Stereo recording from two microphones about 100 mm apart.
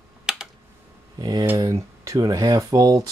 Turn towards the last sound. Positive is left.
turn(degrees=-35)  # may be behind; listen again after turning